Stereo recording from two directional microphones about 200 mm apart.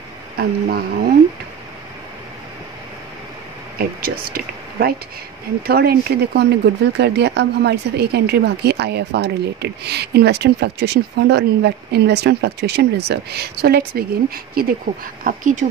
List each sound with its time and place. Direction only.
0.4 s speech: 50° right (ahead or behind)
3.7 s speech: 50° right (ahead or behind)